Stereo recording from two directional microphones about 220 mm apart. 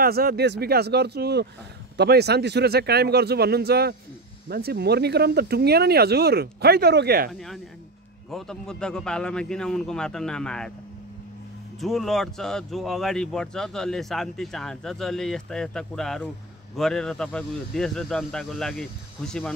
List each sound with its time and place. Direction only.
0.0 s speech: 45° right (ahead or behind)
7.3 s a man's voice: centre (ahead or behind)
11.8 s a man's voice: centre (ahead or behind)